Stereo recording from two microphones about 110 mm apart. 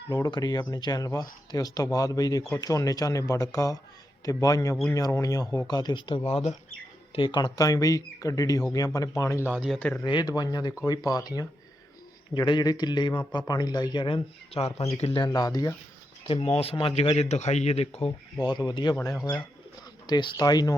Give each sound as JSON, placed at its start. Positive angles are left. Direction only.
{"t": 0.1, "sound": "speech", "side_deg": 40}
{"t": 7.1, "sound": "speech", "side_deg": 50}
{"t": 9.4, "sound": "speech", "side_deg": -15}
{"t": 9.6, "sound": "speech", "side_deg": 10}
{"t": 10.0, "sound": "a man's voice", "side_deg": 40}
{"t": 15.2, "sound": "speech", "side_deg": 35}
{"t": 16.6, "sound": "speech", "side_deg": 60}
{"t": 17.2, "sound": "speech", "side_deg": 90}
{"t": 18.3, "sound": "speech", "side_deg": 40}